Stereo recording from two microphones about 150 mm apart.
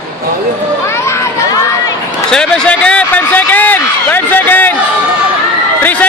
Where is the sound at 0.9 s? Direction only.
20° left (ahead or behind).